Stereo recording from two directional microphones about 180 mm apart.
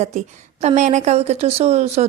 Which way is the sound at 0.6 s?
40° right (ahead or behind).